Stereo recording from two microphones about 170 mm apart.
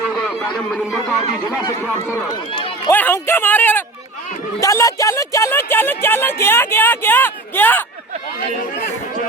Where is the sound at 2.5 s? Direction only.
30° left (ahead or behind).